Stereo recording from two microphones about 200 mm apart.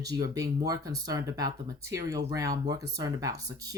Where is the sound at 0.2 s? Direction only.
20° right (ahead or behind).